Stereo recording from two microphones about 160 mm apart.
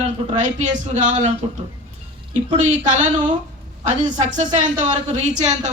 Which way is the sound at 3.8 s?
50° right (ahead or behind).